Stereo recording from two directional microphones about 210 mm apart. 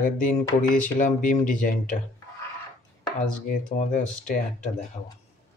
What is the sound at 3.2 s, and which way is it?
Speech, 40° left (ahead or behind).